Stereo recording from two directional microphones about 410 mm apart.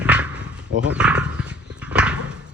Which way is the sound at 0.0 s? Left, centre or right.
Centre.